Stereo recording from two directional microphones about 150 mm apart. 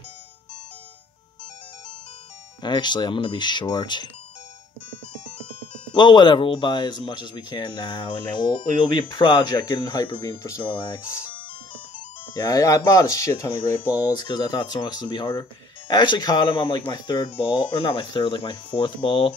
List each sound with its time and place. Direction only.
2.6 s speech: 30° left (ahead or behind)
5.9 s speech: 30° left (ahead or behind)
10.2 s speech: 20° left (ahead or behind)
10.6 s speech: 35° left (ahead or behind)
12.4 s speech: 20° left (ahead or behind)